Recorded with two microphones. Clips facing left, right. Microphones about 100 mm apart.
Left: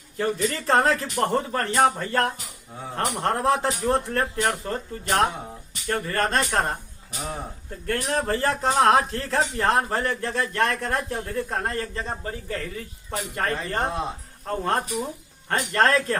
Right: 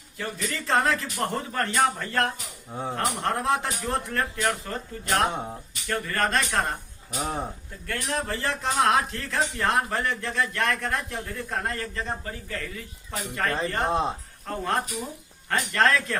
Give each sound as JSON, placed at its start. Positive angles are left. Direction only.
{"t": 0.2, "sound": "speech", "side_deg": 35}
{"t": 7.2, "sound": "speech", "side_deg": -30}
{"t": 7.9, "sound": "speech", "side_deg": 40}